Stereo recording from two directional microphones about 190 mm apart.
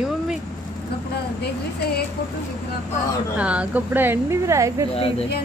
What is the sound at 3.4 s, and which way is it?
A woman's voice, 5° right (ahead or behind).